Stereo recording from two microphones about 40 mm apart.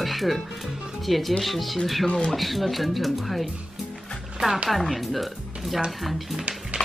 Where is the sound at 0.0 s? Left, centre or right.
Centre.